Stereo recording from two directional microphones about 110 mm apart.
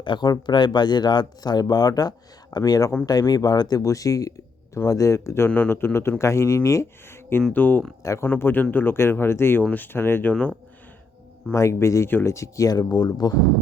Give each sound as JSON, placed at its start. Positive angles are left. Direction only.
{"t": 0.0, "sound": "speech", "side_deg": 45}
{"t": 8.0, "sound": "speech", "side_deg": 30}
{"t": 8.3, "sound": "speech", "side_deg": 20}
{"t": 11.5, "sound": "speech", "side_deg": 25}